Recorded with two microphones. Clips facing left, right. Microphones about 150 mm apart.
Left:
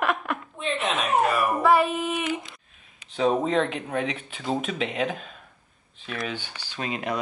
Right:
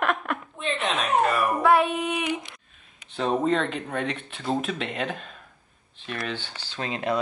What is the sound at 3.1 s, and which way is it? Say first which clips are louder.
Speech: left 1 dB; centre (ahead or behind).